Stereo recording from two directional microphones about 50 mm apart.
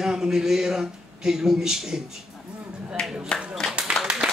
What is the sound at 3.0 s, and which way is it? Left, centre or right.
Clapping, centre.